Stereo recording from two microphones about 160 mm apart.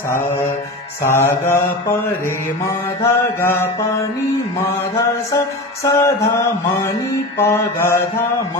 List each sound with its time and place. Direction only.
0.1 s mantra: 15° left (ahead or behind)
3.0 s mantra: 15° left (ahead or behind)
5.9 s mantra: 20° left (ahead or behind)